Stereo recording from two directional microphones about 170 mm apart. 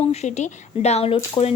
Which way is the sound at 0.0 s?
40° left (ahead or behind).